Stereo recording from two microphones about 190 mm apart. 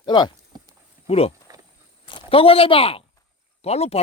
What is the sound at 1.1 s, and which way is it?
Speech, 30° left (ahead or behind).